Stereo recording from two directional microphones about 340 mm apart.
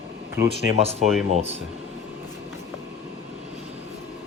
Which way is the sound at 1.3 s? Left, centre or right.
Centre.